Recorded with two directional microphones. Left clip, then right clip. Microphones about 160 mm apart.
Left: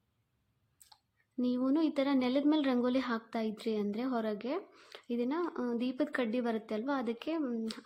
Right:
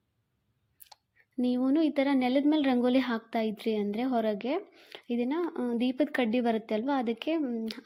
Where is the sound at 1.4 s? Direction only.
15° right (ahead or behind).